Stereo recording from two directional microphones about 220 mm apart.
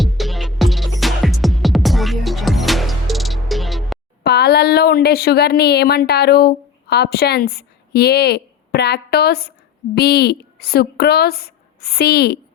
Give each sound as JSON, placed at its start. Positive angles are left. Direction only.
{"t": 0.0, "sound": "music", "side_deg": 0}
{"t": 4.2, "sound": "a woman's voice", "side_deg": 45}